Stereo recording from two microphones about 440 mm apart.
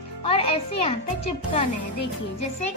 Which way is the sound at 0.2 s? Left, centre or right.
Centre.